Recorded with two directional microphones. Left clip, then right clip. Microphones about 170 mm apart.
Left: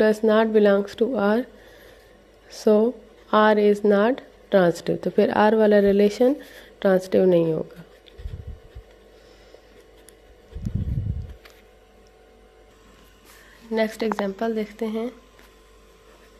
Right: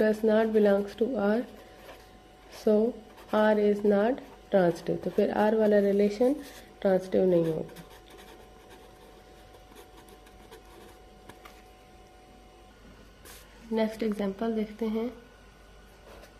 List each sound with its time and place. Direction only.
0.0 s speech: 35° left (ahead or behind)
2.5 s speech: 40° left (ahead or behind)
13.7 s a woman's voice: 20° left (ahead or behind)